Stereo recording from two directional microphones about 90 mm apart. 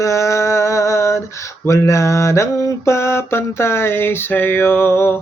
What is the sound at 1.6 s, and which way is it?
Mantra, 35° left (ahead or behind).